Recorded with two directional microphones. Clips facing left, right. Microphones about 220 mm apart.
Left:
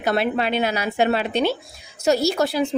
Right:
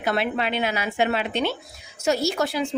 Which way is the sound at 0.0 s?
40° left (ahead or behind).